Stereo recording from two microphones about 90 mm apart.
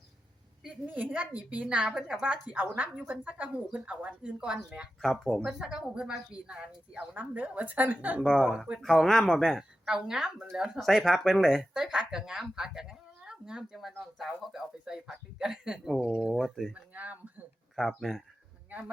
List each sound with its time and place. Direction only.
0.9 s speech: 20° right (ahead or behind)
8.2 s speech: centre (ahead or behind)
9.8 s speech: 10° right (ahead or behind)
16.7 s speech: 15° right (ahead or behind)
17.7 s speech: centre (ahead or behind)